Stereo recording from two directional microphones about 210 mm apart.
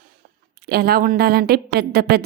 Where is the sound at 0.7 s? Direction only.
45° right (ahead or behind).